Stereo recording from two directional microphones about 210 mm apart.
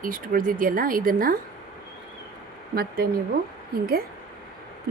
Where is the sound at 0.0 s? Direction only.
40° right (ahead or behind).